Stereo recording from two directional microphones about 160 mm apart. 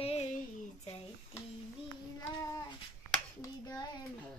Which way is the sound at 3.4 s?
25° left (ahead or behind).